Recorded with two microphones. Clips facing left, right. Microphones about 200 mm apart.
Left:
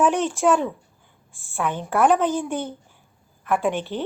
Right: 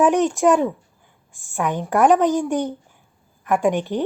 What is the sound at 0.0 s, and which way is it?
A woman's voice, 15° right (ahead or behind).